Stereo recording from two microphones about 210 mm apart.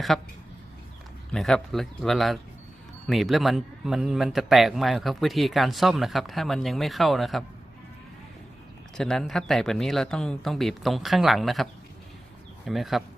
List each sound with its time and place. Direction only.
0.1 s a man's voice: centre (ahead or behind)
1.3 s a man's voice: centre (ahead or behind)
9.0 s a man's voice: centre (ahead or behind)